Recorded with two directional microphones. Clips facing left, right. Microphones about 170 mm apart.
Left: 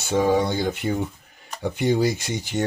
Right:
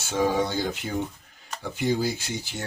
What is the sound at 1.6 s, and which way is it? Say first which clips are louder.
Speech: left 5 dB; 65° left (ahead or behind).